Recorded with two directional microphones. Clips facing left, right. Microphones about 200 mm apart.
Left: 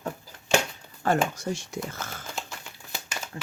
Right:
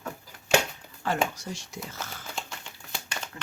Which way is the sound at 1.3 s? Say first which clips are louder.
Left 7 dB; 50° left (ahead or behind).